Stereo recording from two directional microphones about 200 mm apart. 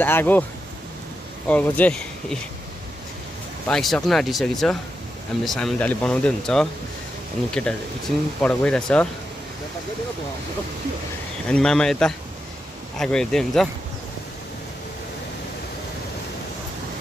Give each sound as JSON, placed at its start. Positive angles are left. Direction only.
{"t": 0.0, "sound": "speech", "side_deg": 10}
{"t": 1.5, "sound": "speech", "side_deg": 5}
{"t": 3.6, "sound": "speech", "side_deg": 0}
{"t": 8.4, "sound": "speech", "side_deg": 5}
{"t": 11.4, "sound": "speech", "side_deg": 5}